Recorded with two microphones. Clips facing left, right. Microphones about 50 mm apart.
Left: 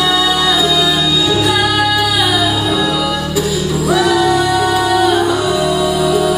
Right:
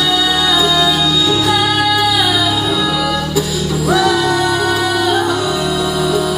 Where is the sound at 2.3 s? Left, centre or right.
Left.